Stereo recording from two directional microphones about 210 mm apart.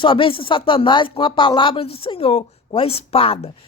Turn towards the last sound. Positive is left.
turn(degrees=25)  # may be behind; listen again after turning